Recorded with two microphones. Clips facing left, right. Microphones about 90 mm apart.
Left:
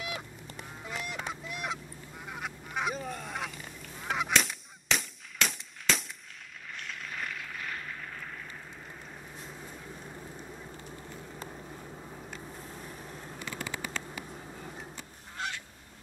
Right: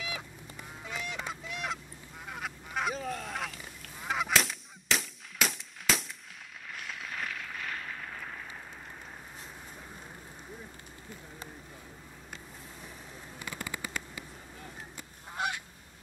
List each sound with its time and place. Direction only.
0.6 s goose: centre (ahead or behind)
6.8 s vehicle: 5° right (ahead or behind)
13.6 s a sound: 70° left (ahead or behind)
15.3 s goose: 15° right (ahead or behind)